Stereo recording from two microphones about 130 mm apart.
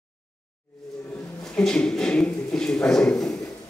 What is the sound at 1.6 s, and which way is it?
A man's voice, 5° left (ahead or behind).